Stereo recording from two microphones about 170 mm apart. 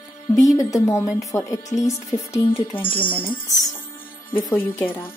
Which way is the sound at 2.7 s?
30° left (ahead or behind).